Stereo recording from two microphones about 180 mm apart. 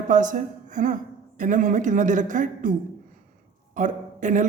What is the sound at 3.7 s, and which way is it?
Speech, 45° right (ahead or behind).